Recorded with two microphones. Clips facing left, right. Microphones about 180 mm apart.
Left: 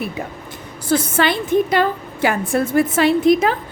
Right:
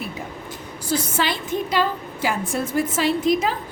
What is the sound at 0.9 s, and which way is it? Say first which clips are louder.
A woman's voice: left 6 dB; 55° left (ahead or behind).